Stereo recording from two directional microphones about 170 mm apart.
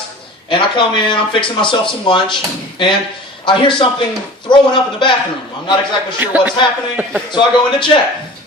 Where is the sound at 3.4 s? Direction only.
30° left (ahead or behind).